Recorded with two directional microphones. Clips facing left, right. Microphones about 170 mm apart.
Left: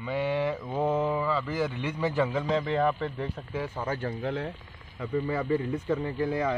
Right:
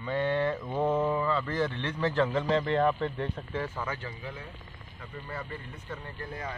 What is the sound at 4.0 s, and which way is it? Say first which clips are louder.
Speech: left 10 dB; 60° left (ahead or behind).